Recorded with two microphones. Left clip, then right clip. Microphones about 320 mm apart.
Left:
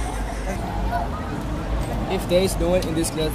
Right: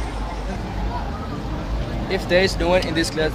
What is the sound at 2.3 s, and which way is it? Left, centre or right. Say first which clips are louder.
Speech: right 3 dB; right.